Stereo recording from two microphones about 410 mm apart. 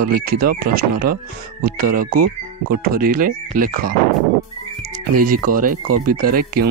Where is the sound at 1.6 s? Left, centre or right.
Right.